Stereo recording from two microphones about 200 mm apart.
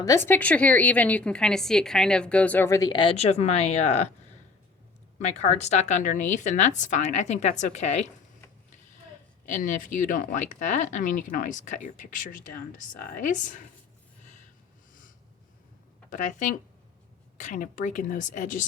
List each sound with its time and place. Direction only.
0.0 s a woman's voice: 15° left (ahead or behind); by 4.0 s 35° left (ahead or behind)
5.2 s speech: 35° left (ahead or behind)
9.6 s speech: 40° left (ahead or behind)
16.0 s speech: 40° left (ahead or behind)